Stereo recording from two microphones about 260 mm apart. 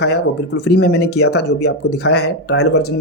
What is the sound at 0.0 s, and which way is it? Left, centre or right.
Speech, left.